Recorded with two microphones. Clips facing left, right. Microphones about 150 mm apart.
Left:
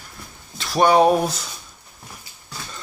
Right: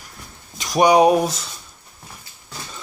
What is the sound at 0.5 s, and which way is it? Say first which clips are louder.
Speech: right 1 dB; 15° right (ahead or behind).